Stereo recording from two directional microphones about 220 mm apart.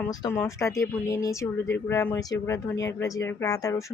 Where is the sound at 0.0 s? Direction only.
15° left (ahead or behind).